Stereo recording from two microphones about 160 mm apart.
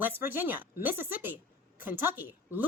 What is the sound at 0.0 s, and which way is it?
A woman's voice, 15° right (ahead or behind).